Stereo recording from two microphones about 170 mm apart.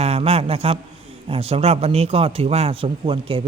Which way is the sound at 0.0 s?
35° right (ahead or behind).